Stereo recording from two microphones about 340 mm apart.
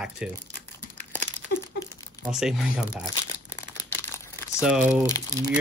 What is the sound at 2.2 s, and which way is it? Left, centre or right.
Speech, centre.